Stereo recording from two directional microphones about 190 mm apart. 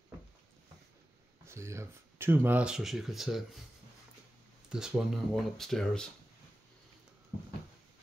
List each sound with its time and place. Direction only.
1.4 s speech: 15° right (ahead or behind)
4.6 s speech: 5° right (ahead or behind)